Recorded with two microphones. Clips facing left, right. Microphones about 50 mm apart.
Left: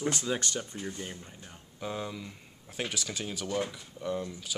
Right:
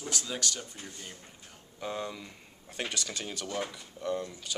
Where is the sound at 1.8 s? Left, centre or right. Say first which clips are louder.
Even; centre.